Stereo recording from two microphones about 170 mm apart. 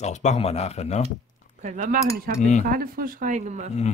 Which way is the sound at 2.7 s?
60° right (ahead or behind).